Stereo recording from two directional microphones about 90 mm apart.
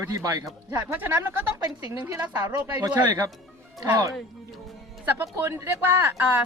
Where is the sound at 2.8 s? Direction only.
40° right (ahead or behind).